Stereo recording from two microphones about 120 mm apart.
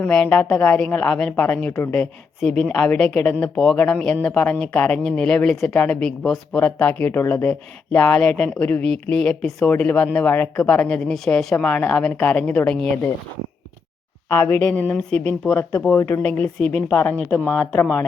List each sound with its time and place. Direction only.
0.0 s a woman's voice: 10° left (ahead or behind)
2.4 s a woman's voice: 5° left (ahead or behind)
14.3 s a woman's voice: 15° left (ahead or behind)